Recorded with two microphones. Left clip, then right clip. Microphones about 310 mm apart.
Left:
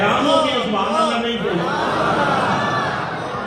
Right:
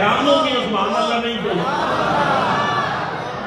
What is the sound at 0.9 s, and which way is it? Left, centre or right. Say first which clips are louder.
Speech: left 3 dB; left.